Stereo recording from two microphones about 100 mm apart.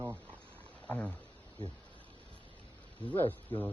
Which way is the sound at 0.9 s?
15° left (ahead or behind).